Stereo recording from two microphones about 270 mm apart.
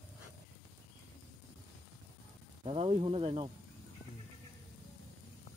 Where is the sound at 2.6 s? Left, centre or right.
Right.